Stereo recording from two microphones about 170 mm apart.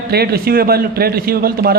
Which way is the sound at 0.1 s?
70° right (ahead or behind).